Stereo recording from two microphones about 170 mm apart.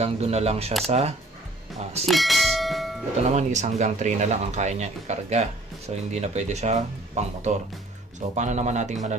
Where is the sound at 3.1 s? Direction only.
40° right (ahead or behind).